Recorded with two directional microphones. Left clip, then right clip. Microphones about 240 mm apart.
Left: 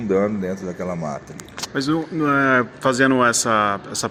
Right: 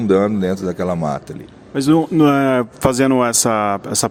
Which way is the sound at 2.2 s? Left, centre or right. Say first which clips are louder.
Right 3 dB; right.